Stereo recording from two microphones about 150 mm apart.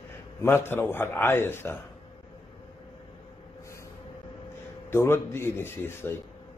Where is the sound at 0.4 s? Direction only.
15° left (ahead or behind).